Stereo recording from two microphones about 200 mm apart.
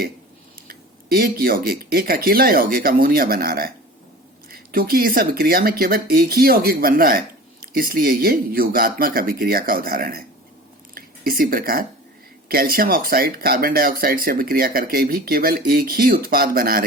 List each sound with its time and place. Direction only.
0.7 s speech: 50° right (ahead or behind)